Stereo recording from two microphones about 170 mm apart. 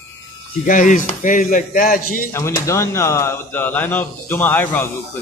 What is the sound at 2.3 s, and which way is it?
Speech, 15° left (ahead or behind).